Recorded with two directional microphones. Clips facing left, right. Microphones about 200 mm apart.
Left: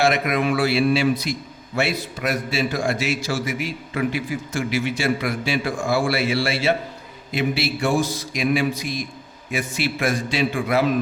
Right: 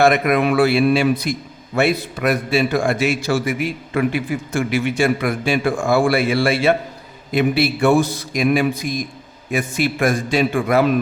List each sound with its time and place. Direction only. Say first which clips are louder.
0.0 s a man's voice: right 5 dB; 55° right (ahead or behind)